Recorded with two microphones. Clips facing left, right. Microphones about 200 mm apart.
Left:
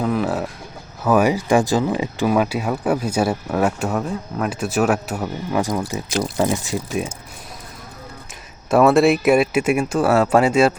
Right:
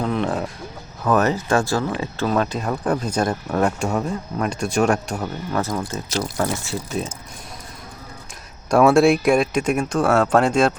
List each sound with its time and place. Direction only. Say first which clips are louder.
0.0 s speech: left 2 dB; 5° left (ahead or behind)
8.7 s speech: even; centre (ahead or behind)